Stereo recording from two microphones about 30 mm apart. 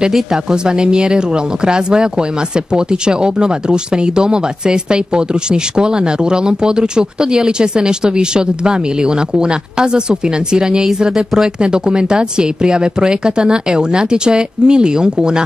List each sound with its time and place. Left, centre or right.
0.3 s speech: right